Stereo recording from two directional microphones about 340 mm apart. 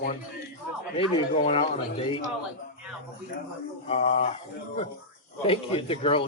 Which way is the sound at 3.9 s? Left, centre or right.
Centre.